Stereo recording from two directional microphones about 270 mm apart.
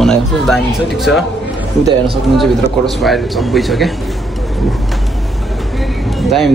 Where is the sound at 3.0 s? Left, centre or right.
Centre.